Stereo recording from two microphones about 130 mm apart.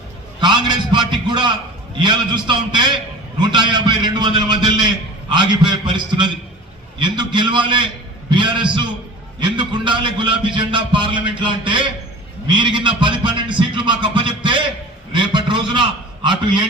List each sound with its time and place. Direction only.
0.3 s a man's voice: 35° right (ahead or behind)